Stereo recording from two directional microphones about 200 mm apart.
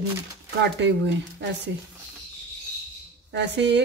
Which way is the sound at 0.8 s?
60° right (ahead or behind).